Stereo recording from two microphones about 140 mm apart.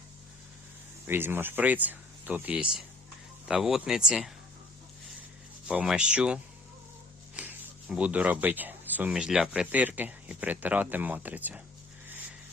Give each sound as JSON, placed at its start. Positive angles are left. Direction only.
{"t": 1.0, "sound": "speech", "side_deg": -15}
{"t": 5.6, "sound": "speech", "side_deg": -5}